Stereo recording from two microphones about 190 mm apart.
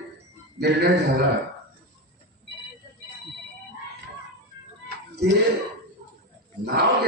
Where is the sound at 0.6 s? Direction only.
60° right (ahead or behind).